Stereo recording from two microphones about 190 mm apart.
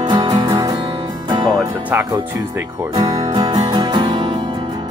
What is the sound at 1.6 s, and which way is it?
Music, 10° right (ahead or behind).